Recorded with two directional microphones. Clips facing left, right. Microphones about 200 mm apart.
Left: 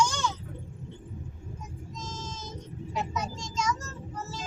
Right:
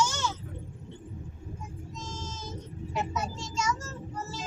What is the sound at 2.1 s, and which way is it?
Child singing, 10° right (ahead or behind).